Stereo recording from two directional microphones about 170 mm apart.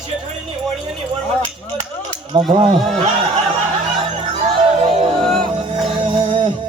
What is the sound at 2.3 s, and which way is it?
Speech, 30° right (ahead or behind).